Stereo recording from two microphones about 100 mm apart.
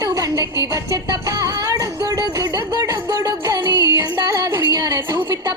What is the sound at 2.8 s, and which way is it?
Music, 30° right (ahead or behind).